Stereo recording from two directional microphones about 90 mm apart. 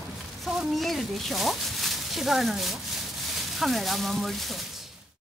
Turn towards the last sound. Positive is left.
turn(degrees=0)  # may be behind; listen again after turning